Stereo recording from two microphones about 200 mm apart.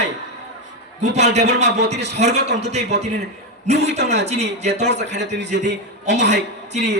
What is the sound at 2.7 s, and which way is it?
A man's voice, 35° right (ahead or behind).